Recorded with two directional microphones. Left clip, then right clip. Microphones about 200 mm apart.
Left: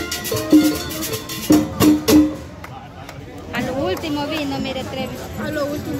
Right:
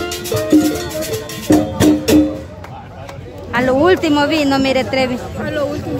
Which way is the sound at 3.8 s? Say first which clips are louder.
Right 10 dB; 50° right (ahead or behind).